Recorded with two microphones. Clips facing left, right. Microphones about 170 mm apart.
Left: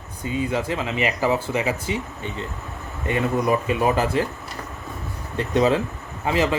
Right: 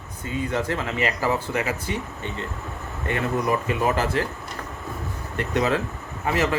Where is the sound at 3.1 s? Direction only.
20° left (ahead or behind).